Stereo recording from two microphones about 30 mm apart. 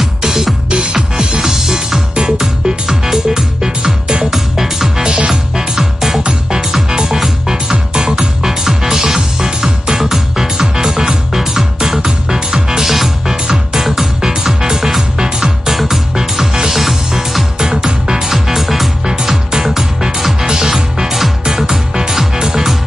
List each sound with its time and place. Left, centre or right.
0.2 s music: centre
0.9 s music: right
2.1 s music: right
3.1 s music: centre
4.3 s music: centre
5.0 s music: right
5.8 s music: centre
18.1 s music: centre
21.6 s music: right
22.1 s music: centre
22.4 s music: right